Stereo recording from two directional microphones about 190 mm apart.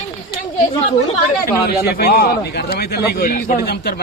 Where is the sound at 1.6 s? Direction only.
55° left (ahead or behind).